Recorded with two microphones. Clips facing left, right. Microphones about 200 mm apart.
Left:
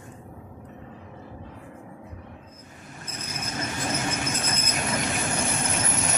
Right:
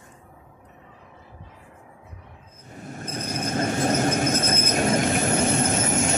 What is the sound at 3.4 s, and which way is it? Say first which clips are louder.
Train: right 8 dB; 55° right (ahead or behind).